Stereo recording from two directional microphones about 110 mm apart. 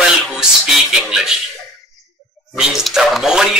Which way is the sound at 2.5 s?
Centre (ahead or behind).